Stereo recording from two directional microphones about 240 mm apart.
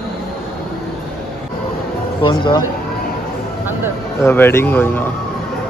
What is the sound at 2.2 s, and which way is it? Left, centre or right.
Speech, centre.